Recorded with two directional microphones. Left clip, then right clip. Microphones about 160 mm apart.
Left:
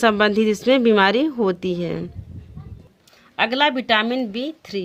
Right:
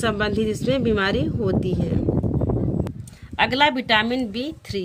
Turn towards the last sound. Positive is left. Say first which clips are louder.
# left 1 dB
turn(degrees=20)  # may be behind; listen again after turning